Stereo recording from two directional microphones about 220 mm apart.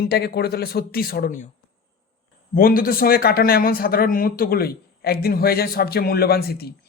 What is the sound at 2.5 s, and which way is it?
Speech, 40° left (ahead or behind).